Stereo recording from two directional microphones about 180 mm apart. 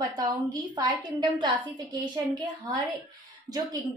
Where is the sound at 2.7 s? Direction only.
20° right (ahead or behind).